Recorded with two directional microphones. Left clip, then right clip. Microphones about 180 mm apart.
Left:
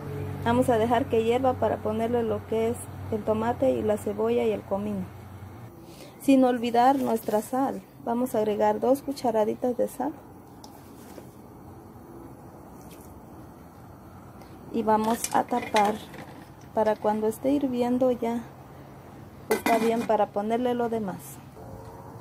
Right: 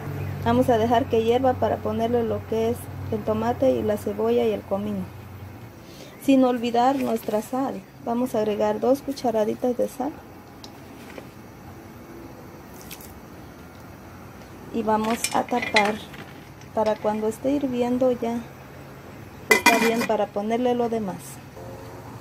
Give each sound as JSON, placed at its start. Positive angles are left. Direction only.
{"t": 0.4, "sound": "a woman's voice", "side_deg": 5}
{"t": 6.2, "sound": "speech", "side_deg": 15}
{"t": 14.7, "sound": "speech", "side_deg": 15}
{"t": 16.7, "sound": "speech", "side_deg": 15}
{"t": 19.9, "sound": "a woman's voice", "side_deg": 5}